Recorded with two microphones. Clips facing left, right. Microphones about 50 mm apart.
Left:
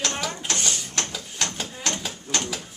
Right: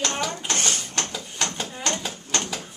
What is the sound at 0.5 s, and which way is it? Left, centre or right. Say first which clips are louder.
Mechanisms: right 2 dB; right.